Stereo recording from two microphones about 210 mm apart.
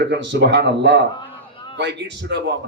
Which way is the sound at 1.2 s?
20° left (ahead or behind).